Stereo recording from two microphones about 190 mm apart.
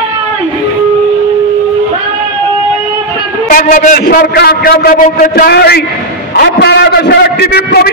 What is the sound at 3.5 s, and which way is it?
A man's voice, 45° left (ahead or behind).